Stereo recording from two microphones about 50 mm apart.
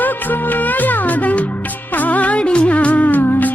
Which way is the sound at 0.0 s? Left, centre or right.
Left.